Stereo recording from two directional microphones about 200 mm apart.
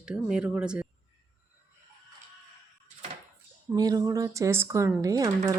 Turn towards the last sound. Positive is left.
turn(degrees=-15)  # may be behind; listen again after turning